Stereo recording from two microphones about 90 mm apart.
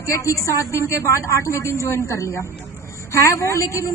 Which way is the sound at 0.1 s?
35° left (ahead or behind).